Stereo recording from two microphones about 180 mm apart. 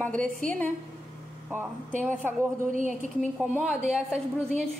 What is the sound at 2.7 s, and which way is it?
Speech, 45° right (ahead or behind).